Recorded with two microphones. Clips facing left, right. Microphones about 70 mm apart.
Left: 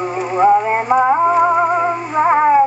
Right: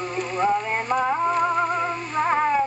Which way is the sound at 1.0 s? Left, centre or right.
Left.